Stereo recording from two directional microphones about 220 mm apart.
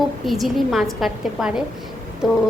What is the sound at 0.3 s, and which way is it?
A woman's voice, centre (ahead or behind).